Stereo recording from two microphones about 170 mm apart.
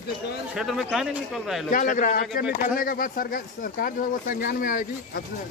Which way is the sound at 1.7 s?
50° left (ahead or behind).